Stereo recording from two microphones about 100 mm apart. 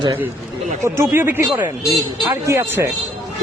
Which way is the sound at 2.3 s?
30° right (ahead or behind).